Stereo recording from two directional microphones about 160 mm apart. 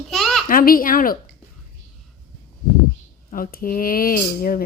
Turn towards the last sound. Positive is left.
turn(degrees=65)  # may be behind; listen again after turning